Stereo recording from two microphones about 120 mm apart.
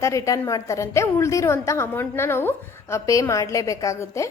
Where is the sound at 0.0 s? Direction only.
25° left (ahead or behind).